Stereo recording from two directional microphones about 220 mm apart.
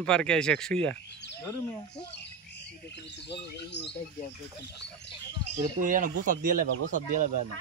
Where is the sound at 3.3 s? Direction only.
50° left (ahead or behind).